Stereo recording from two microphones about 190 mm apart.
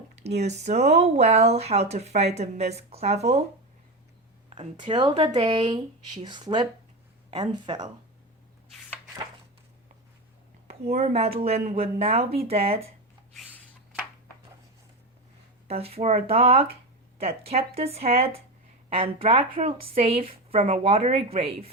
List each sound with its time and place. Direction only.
0.2 s speech: 35° right (ahead or behind)
4.4 s speech: 30° right (ahead or behind)
10.7 s speech: 35° right (ahead or behind)
15.6 s speech: 30° right (ahead or behind)